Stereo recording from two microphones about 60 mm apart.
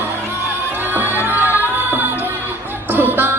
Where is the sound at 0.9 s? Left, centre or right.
Right.